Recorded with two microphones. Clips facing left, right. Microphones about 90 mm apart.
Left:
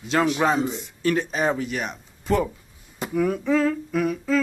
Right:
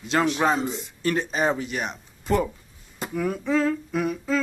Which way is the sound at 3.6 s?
10° right (ahead or behind).